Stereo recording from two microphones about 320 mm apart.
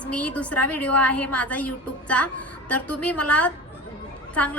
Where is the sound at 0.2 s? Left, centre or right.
Centre.